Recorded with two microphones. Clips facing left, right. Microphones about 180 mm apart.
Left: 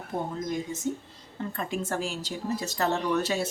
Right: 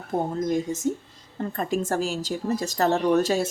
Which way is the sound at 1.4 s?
45° right (ahead or behind).